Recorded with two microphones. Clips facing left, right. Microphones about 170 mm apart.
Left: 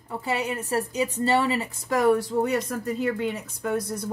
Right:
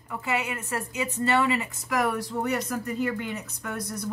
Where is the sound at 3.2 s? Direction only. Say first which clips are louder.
Left 6 dB; 25° left (ahead or behind).